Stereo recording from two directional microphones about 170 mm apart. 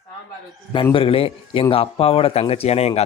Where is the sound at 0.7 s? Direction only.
30° left (ahead or behind).